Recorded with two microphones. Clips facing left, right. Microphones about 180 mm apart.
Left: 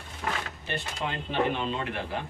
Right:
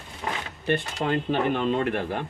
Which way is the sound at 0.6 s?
50° right (ahead or behind).